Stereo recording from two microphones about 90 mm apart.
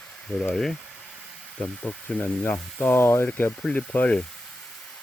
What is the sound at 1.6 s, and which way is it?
Speech, 15° left (ahead or behind).